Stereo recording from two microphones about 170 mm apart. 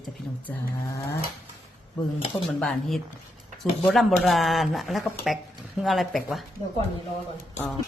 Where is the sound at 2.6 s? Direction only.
Centre (ahead or behind).